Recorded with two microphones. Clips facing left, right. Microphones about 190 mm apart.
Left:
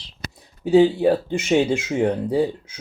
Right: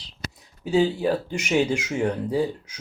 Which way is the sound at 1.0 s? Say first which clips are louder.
Left 5 dB; 25° left (ahead or behind).